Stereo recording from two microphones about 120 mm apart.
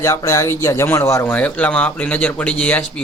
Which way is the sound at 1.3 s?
10° left (ahead or behind).